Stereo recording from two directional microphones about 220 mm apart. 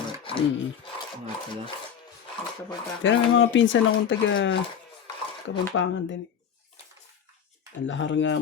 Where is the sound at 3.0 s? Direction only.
60° left (ahead or behind).